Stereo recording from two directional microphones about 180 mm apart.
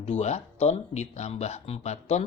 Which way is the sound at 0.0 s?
40° left (ahead or behind).